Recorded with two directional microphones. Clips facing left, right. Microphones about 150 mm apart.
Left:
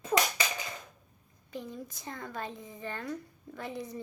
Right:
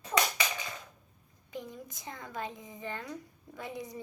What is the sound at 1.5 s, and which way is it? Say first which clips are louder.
Speech: left 2 dB; 20° right (ahead or behind).